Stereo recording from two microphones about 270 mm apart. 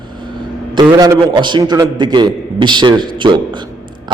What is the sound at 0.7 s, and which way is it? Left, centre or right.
A man's voice, centre.